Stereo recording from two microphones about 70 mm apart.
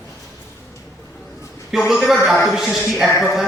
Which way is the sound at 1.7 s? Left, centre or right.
Centre.